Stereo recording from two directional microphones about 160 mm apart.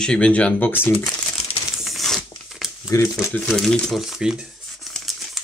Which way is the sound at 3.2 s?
5° left (ahead or behind).